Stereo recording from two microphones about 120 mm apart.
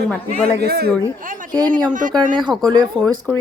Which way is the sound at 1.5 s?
35° right (ahead or behind).